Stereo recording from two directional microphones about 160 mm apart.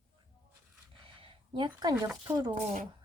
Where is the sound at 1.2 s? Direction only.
30° right (ahead or behind).